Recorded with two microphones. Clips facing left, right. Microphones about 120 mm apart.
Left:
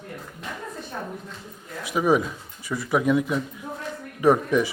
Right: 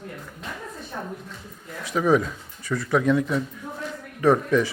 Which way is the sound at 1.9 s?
15° left (ahead or behind).